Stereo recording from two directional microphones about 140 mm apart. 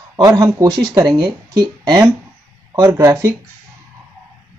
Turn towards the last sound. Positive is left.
turn(degrees=-20)  # may be behind; listen again after turning